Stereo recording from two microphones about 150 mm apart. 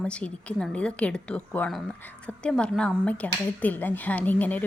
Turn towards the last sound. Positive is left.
turn(degrees=10)  # may be behind; listen again after turning